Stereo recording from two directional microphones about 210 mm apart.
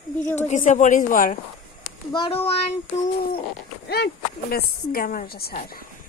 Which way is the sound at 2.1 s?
25° left (ahead or behind).